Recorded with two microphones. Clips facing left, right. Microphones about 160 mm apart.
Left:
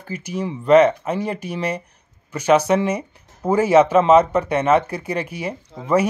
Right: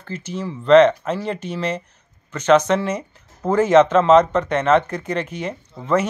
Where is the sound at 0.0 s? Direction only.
10° left (ahead or behind).